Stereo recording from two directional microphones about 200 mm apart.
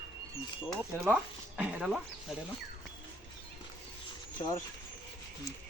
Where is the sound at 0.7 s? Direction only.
5° right (ahead or behind).